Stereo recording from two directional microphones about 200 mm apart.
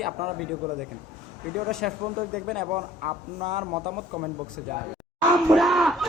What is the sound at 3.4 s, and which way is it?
Speech, 25° right (ahead or behind).